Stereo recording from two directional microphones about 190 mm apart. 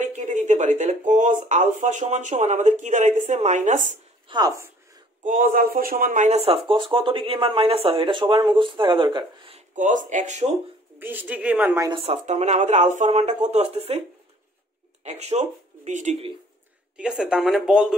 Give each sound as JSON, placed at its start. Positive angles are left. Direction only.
{"t": 0.1, "sound": "speech", "side_deg": -40}
{"t": 4.3, "sound": "a sound", "side_deg": -20}
{"t": 5.2, "sound": "speech", "side_deg": -45}
{"t": 9.8, "sound": "speech", "side_deg": -40}
{"t": 11.0, "sound": "a woman's voice", "side_deg": -10}
{"t": 11.9, "sound": "speech", "side_deg": -30}
{"t": 15.0, "sound": "speech", "side_deg": -35}
{"t": 16.9, "sound": "speech", "side_deg": -5}